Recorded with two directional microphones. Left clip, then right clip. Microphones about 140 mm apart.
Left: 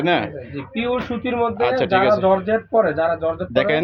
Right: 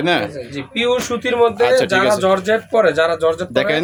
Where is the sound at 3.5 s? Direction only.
35° right (ahead or behind).